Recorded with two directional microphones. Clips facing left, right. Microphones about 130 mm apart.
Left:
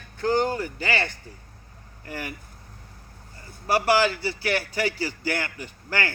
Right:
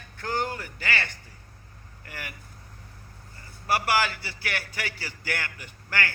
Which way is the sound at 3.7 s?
35° left (ahead or behind).